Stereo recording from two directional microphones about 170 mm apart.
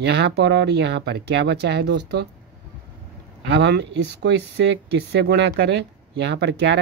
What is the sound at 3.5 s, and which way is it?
Speech, 90° right.